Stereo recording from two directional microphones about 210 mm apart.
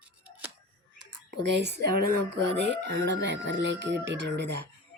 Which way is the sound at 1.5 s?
55° right (ahead or behind).